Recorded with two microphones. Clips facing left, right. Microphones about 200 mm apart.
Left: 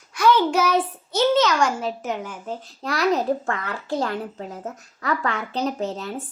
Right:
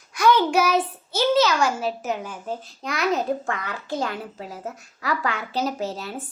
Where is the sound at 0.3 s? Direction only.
10° right (ahead or behind).